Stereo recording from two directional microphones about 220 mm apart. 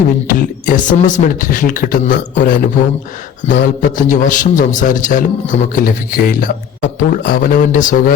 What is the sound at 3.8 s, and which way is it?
Speech, 35° left (ahead or behind).